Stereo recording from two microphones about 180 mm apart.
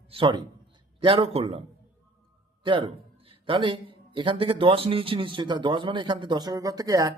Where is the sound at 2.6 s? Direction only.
30° right (ahead or behind).